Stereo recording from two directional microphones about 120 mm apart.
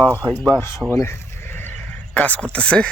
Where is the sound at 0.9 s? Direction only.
20° left (ahead or behind).